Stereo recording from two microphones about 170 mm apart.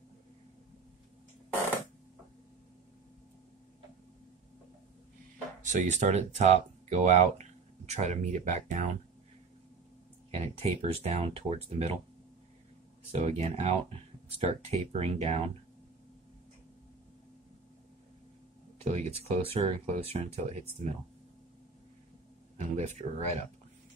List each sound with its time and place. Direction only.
5.6 s speech: 45° right (ahead or behind)
10.3 s speech: 40° right (ahead or behind)
13.1 s speech: 40° right (ahead or behind)
18.8 s speech: 40° right (ahead or behind)
22.6 s speech: 40° right (ahead or behind)